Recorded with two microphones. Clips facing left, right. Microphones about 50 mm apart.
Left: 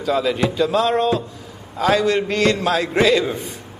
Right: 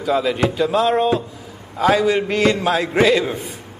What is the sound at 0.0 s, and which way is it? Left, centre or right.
A man's voice, centre.